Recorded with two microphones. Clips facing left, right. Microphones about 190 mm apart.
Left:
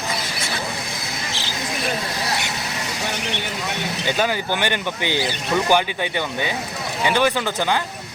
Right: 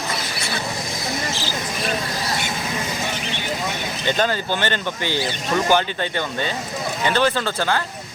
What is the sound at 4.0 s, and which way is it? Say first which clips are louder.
Speech: right 1 dB; 10° left (ahead or behind).